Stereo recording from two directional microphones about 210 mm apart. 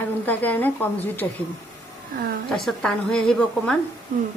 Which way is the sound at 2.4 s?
5° left (ahead or behind).